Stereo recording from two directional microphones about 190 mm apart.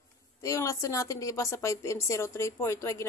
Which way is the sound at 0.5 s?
15° left (ahead or behind).